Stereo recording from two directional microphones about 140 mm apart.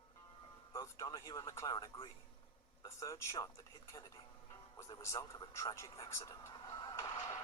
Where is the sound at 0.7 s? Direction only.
20° left (ahead or behind).